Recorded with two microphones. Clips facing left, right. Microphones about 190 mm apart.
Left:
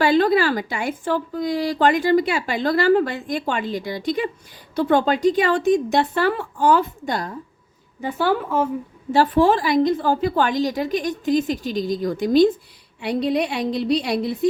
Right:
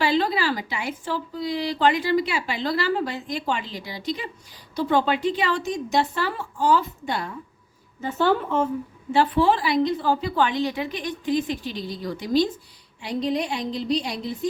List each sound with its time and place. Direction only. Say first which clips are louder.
0.0 s a woman's voice: left 6 dB; 50° left (ahead or behind)
7.1 s speech: right 1 dB; 40° left (ahead or behind)
8.0 s a woman's voice: left 1 dB; 10° left (ahead or behind)
9.1 s a woman's voice: left 3 dB; 45° left (ahead or behind)
13.0 s a woman's voice: left 4 dB; 65° left (ahead or behind)